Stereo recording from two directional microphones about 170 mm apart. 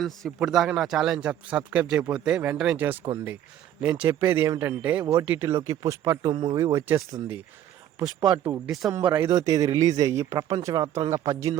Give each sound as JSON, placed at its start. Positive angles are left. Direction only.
{"t": 0.0, "sound": "a man's voice", "side_deg": 0}
{"t": 8.4, "sound": "speech", "side_deg": -10}
{"t": 9.0, "sound": "speech", "side_deg": -30}